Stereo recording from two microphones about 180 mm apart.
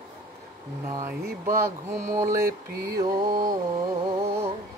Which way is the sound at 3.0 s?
25° right (ahead or behind).